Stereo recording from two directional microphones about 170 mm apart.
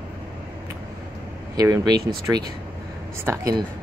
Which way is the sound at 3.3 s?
20° right (ahead or behind).